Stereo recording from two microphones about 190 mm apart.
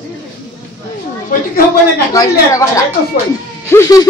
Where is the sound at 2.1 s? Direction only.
15° left (ahead or behind).